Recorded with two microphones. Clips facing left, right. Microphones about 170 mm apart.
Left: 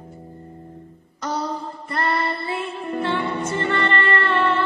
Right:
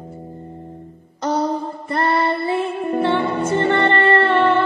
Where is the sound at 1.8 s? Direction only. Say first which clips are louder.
Right 5 dB; 25° right (ahead or behind).